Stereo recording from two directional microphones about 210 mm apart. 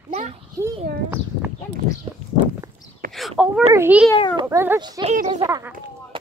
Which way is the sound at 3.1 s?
Centre (ahead or behind).